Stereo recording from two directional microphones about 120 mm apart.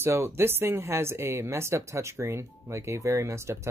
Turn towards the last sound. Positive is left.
turn(degrees=-25)  # may be behind; listen again after turning